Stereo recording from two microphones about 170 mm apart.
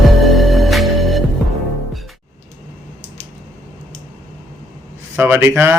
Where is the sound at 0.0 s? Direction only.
Centre (ahead or behind).